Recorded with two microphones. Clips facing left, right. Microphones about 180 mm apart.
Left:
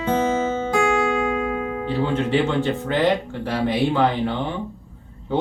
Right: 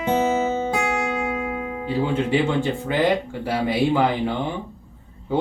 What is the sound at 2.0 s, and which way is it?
Speech, 10° right (ahead or behind).